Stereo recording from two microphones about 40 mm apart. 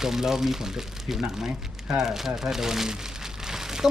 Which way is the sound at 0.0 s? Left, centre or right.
Centre.